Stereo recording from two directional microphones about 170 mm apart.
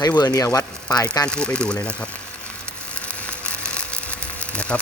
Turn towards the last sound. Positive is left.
turn(degrees=5)  # may be behind; listen again after turning